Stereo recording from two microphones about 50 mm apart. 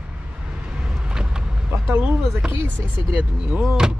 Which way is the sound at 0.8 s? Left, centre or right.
Centre.